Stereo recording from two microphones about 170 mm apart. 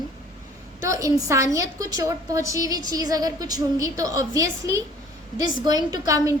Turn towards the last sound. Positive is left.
turn(degrees=-20)  # may be behind; listen again after turning